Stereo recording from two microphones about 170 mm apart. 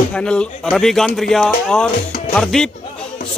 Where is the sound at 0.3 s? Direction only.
5° left (ahead or behind).